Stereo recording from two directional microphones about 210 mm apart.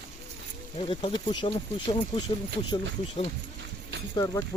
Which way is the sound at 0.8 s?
25° left (ahead or behind).